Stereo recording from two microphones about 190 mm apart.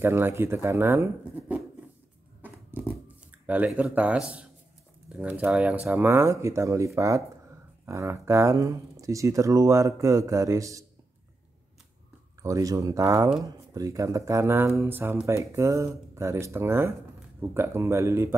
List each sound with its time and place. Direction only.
0.0 s speech: 10° right (ahead or behind)
2.4 s a sound: 10° right (ahead or behind)
5.1 s speech: 10° right (ahead or behind)
12.4 s speech: 15° right (ahead or behind)